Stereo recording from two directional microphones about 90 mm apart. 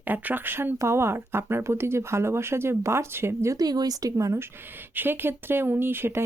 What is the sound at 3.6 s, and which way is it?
Speech, 45° right (ahead or behind).